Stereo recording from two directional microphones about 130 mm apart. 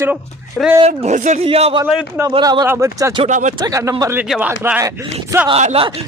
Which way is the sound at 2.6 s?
25° right (ahead or behind).